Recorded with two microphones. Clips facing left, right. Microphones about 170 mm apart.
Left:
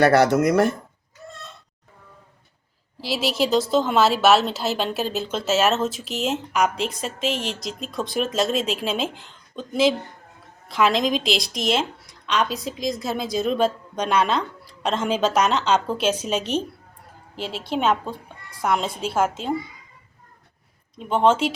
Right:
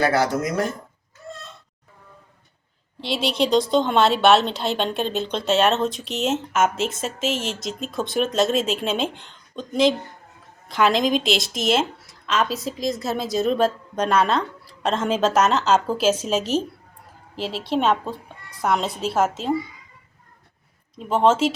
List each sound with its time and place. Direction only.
0.0 s speech: 70° left (ahead or behind)
3.0 s a woman's voice: 5° left (ahead or behind)
21.0 s a woman's voice: centre (ahead or behind)